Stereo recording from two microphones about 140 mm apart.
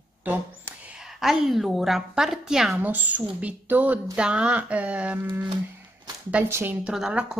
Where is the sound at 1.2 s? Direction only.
Centre (ahead or behind).